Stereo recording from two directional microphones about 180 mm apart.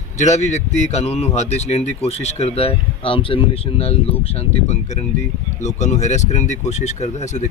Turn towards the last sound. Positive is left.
turn(degrees=40)  # may be behind; listen again after turning